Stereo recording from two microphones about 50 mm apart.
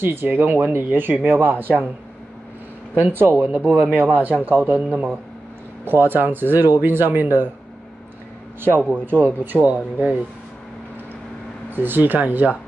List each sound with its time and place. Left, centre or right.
0.0 s speech: right
1.4 s speech: right
3.0 s speech: right
3.4 s speech: right
3.9 s speech: right
4.7 s speech: right
5.9 s speech: right
8.5 s speech: right
11.7 s speech: right